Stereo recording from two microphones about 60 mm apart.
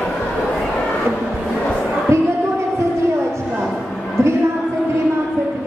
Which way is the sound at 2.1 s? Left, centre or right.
Right.